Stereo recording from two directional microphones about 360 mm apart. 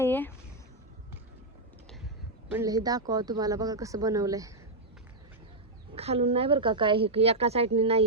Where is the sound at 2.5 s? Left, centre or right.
Centre.